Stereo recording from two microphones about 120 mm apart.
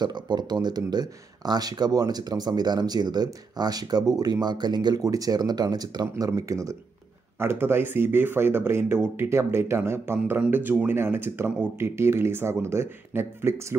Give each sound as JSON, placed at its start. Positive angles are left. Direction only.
{"t": 0.0, "sound": "speech", "side_deg": -40}